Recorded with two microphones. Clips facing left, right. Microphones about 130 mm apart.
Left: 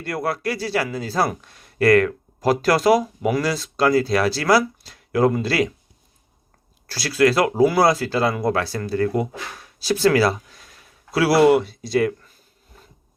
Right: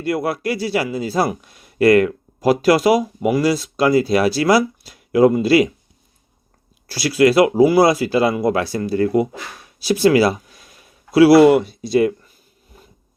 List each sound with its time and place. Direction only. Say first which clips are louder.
0.0 s a man's voice: right 4 dB; 15° right (ahead or behind)
6.8 s a man's voice: right 3 dB; 15° right (ahead or behind)